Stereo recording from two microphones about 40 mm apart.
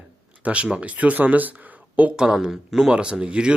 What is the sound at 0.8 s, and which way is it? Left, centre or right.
Speech, right.